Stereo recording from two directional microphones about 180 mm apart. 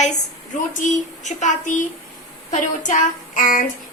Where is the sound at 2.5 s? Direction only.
45° left (ahead or behind).